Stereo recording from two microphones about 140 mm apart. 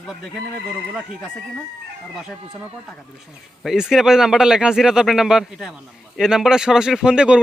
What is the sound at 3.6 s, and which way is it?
Speech, 5° right (ahead or behind).